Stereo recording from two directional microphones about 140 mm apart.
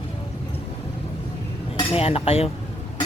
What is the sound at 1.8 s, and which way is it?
Speech, 45° left (ahead or behind).